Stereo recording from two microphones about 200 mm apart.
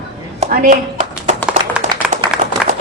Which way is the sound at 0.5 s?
40° right (ahead or behind).